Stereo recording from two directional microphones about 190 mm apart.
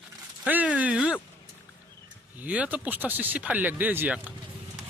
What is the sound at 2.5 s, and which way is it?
Speech, 5° right (ahead or behind).